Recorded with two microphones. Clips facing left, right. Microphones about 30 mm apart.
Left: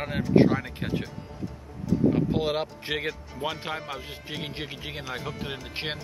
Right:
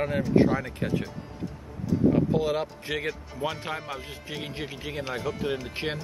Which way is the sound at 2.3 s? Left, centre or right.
Left.